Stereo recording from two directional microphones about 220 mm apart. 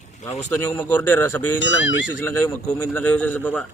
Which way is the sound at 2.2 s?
10° left (ahead or behind).